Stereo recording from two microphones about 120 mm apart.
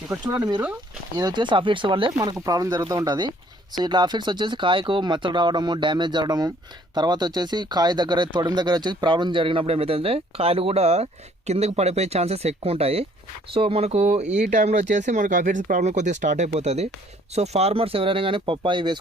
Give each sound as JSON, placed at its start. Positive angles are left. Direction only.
{"t": 0.1, "sound": "speech", "side_deg": -30}
{"t": 2.2, "sound": "speech", "side_deg": -30}